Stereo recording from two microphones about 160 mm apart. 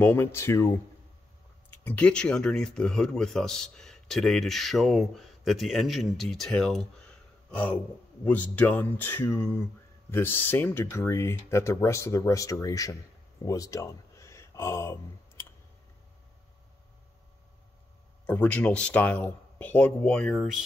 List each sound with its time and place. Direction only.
0.0 s speech: 15° left (ahead or behind)
13.4 s a sound: 20° left (ahead or behind)
18.2 s speech: 10° left (ahead or behind)